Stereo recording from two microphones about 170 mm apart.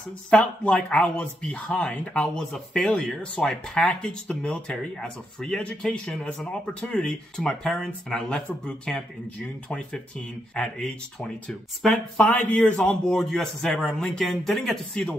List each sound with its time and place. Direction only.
0.3 s speech: 5° left (ahead or behind)